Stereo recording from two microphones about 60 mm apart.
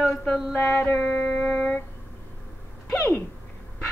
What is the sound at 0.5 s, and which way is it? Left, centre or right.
Mantra, left.